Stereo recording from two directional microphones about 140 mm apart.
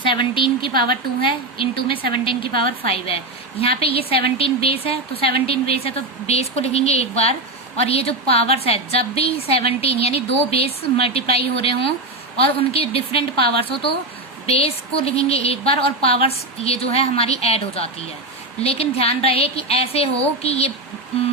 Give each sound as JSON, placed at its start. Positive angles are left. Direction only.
{"t": 0.0, "sound": "a woman's voice", "side_deg": 35}
{"t": 0.7, "sound": "a woman's voice", "side_deg": -90}
{"t": 1.2, "sound": "a woman's voice", "side_deg": 40}